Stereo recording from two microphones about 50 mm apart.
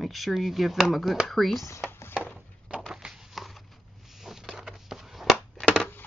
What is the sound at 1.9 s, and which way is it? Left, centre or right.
Music, left.